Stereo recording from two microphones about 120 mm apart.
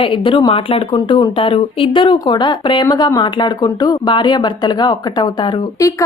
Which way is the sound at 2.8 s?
25° left (ahead or behind).